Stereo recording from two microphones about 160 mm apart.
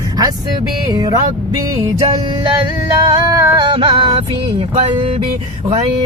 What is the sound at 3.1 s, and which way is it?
Music, 20° right (ahead or behind).